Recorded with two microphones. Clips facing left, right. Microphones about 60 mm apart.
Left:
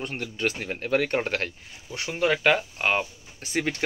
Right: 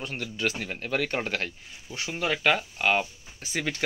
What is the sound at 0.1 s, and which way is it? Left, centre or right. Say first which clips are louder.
Speech: right 1 dB; left.